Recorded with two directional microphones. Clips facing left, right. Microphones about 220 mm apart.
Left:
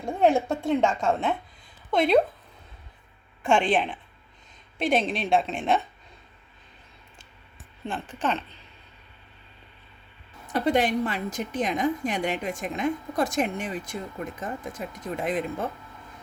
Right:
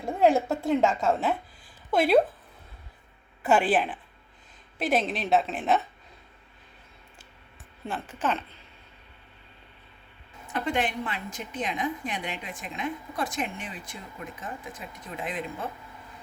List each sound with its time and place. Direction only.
0.0 s a woman's voice: centre (ahead or behind)
3.4 s a woman's voice: 5° right (ahead or behind)
7.9 s speech: 5° right (ahead or behind)
10.5 s a woman's voice: 40° left (ahead or behind)